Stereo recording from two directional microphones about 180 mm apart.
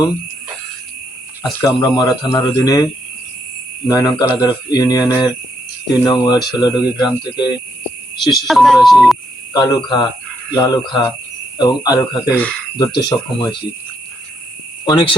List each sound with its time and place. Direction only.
1.6 s speech: 20° left (ahead or behind)
8.2 s speech: centre (ahead or behind)
9.5 s speech: 20° left (ahead or behind)
12.4 s speech: 5° left (ahead or behind)
12.7 s speech: 25° left (ahead or behind)
14.8 s speech: 25° left (ahead or behind)